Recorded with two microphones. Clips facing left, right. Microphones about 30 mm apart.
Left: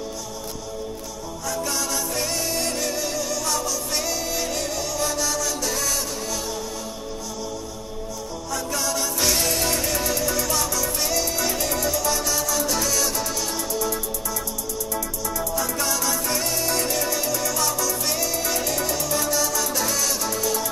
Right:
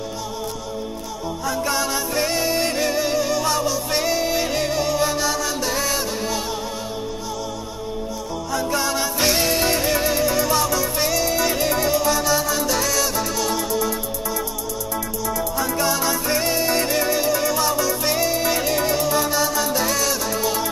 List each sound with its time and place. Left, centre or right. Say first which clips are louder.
1.4 s music: right 4 dB; right
8.5 s music: right 4 dB; right
11.1 s music: right 4 dB; centre
11.4 s music: right 4 dB; right
12.1 s music: right 5 dB; centre
12.6 s music: right 3 dB; centre
13.7 s music: right 3 dB; right
19.9 s music: right 3 dB; centre
20.3 s music: right 3 dB; right